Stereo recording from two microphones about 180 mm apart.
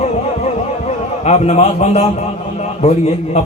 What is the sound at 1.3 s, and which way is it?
Speech, 40° left (ahead or behind).